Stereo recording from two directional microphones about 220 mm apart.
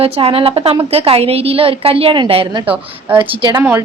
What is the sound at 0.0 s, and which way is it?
A woman's voice, 25° right (ahead or behind).